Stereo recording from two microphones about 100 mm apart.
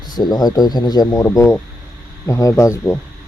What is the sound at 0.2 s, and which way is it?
Speech, 40° left (ahead or behind).